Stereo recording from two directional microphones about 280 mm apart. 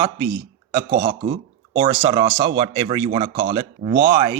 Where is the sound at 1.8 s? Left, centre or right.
Centre.